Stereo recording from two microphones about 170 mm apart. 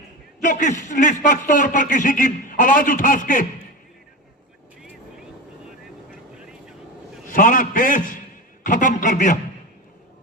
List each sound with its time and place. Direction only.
0.4 s a man's voice: 50° left (ahead or behind)
6.4 s vehicle: 5° right (ahead or behind)
7.3 s a man's voice: 55° left (ahead or behind)